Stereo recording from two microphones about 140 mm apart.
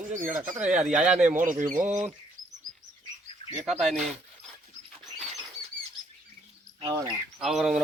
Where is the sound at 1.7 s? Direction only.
65° right (ahead or behind).